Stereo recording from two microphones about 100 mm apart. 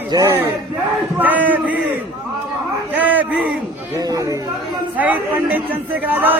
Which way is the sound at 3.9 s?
30° right (ahead or behind).